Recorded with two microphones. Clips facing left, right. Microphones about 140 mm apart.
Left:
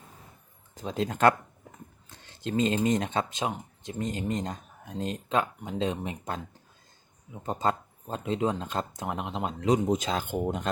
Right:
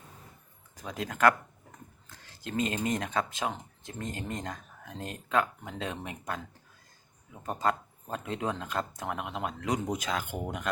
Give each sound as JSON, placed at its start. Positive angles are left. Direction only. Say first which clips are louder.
{"t": 0.7, "sound": "speech", "louder": "left 6 dB", "side_deg": 25}